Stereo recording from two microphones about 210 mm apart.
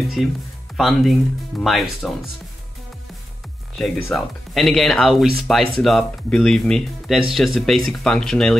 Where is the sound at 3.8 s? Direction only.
Centre (ahead or behind).